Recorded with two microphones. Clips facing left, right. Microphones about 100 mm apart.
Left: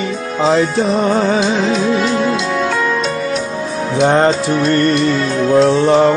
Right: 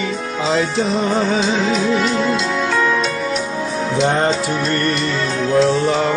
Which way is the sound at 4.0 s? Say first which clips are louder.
Left 6 dB; 55° left (ahead or behind).